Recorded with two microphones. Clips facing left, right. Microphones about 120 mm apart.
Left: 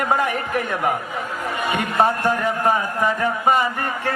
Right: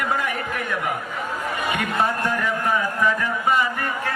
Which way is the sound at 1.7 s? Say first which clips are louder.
Left 5 dB; 35° left (ahead or behind).